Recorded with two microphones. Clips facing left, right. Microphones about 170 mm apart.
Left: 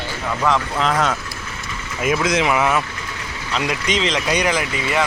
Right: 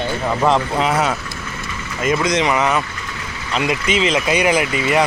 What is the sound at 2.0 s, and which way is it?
Speech, 5° left (ahead or behind).